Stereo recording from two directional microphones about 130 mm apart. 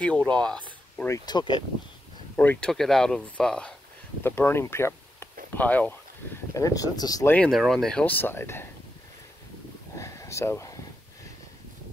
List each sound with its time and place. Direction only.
0.3 s speech: 5° left (ahead or behind)
1.0 s speech: 25° left (ahead or behind)
2.3 s speech: 10° left (ahead or behind)
2.7 s speech: centre (ahead or behind)
4.2 s speech: 20° left (ahead or behind)
6.5 s speech: 25° left (ahead or behind)
7.2 s speech: 10° left (ahead or behind)
9.9 s a sound: 25° left (ahead or behind)